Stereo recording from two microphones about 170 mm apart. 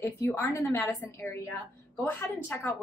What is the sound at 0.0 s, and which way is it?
A woman's voice, 15° left (ahead or behind).